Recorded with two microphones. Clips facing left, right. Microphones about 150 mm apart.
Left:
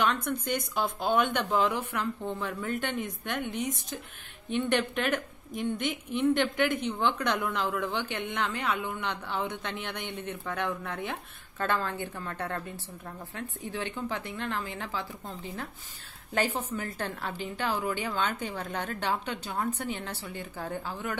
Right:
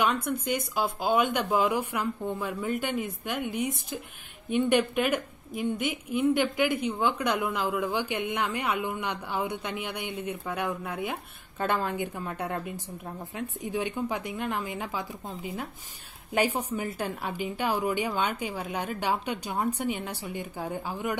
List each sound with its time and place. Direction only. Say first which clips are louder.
0.0 s a woman's voice: right 1 dB; 10° right (ahead or behind)